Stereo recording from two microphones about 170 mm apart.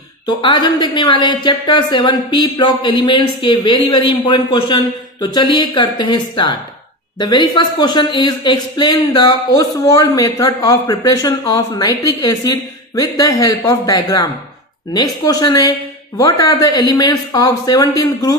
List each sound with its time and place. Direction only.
0.4 s a woman's voice: 30° left (ahead or behind)